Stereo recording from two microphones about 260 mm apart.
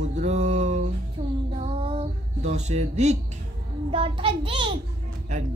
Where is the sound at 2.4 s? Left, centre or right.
Right.